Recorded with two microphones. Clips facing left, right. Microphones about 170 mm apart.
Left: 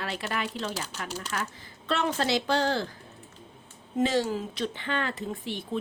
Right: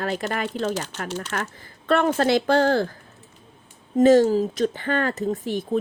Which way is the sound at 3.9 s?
45° right (ahead or behind).